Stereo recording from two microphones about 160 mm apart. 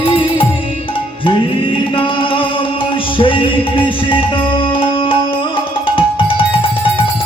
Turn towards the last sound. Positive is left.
turn(degrees=35)  # may be behind; listen again after turning